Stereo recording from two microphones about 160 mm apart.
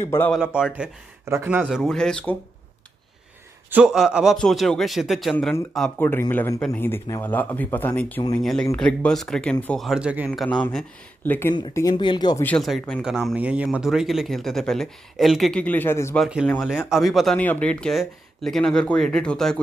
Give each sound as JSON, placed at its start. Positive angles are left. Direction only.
{"t": 0.3, "sound": "speech", "side_deg": -5}
{"t": 1.8, "sound": "speech", "side_deg": 5}
{"t": 3.7, "sound": "speech", "side_deg": -5}
{"t": 5.9, "sound": "speech", "side_deg": 15}
{"t": 9.8, "sound": "speech", "side_deg": -5}
{"t": 10.3, "sound": "speech", "side_deg": 5}
{"t": 11.7, "sound": "speech", "side_deg": 25}
{"t": 12.4, "sound": "speech", "side_deg": 0}
{"t": 16.2, "sound": "speech", "side_deg": -5}